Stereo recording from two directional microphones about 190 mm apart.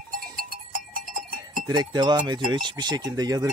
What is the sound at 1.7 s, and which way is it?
Speech, 20° right (ahead or behind).